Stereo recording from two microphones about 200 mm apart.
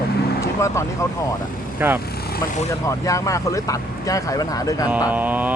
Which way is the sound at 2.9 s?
15° left (ahead or behind).